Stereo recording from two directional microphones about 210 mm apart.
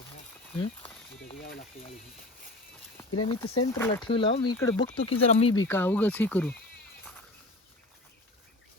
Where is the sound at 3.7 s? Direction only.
10° left (ahead or behind).